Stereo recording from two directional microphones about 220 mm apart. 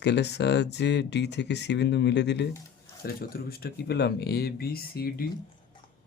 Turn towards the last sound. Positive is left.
turn(degrees=45)  # may be behind; listen again after turning